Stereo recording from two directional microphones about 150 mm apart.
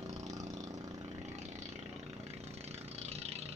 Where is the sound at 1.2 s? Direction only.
50° right (ahead or behind).